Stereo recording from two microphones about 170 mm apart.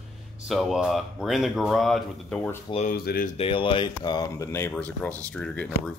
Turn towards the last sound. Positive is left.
turn(degrees=5)  # may be behind; listen again after turning